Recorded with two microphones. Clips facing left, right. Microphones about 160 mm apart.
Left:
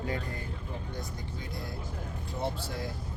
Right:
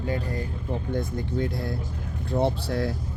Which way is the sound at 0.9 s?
60° right (ahead or behind).